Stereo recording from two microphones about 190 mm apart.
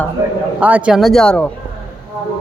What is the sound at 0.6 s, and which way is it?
Speech, 10° right (ahead or behind).